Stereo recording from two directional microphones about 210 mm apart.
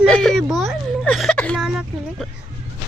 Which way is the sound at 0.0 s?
Centre (ahead or behind).